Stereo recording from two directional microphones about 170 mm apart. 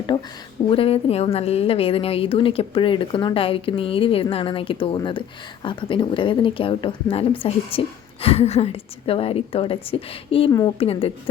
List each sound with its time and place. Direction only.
0.1 s a woman's voice: 30° left (ahead or behind)